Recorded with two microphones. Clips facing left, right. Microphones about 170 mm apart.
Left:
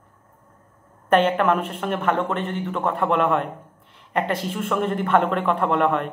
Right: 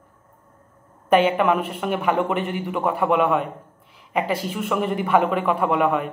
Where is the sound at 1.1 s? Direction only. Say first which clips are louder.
Right 1 dB; 5° right (ahead or behind).